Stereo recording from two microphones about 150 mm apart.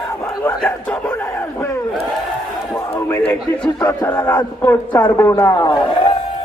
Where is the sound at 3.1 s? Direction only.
10° left (ahead or behind).